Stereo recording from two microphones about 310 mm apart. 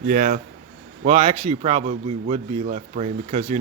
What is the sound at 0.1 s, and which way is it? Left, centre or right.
A man's voice, right.